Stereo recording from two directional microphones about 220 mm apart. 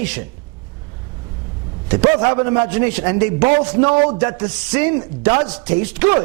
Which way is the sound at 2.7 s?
15° right (ahead or behind).